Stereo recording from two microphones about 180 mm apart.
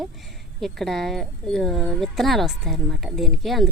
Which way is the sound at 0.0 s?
Centre (ahead or behind).